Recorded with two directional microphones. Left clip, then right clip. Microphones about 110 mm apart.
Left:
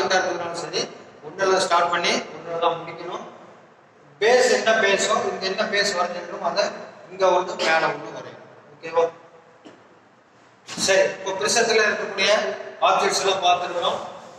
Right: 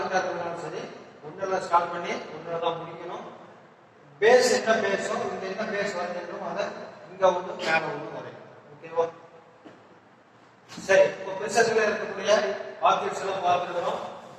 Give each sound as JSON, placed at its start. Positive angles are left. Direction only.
{"t": 0.0, "sound": "a man's voice", "side_deg": 25}
{"t": 10.8, "sound": "a man's voice", "side_deg": 30}